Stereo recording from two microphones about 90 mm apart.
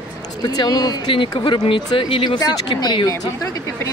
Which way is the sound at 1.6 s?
75° left (ahead or behind).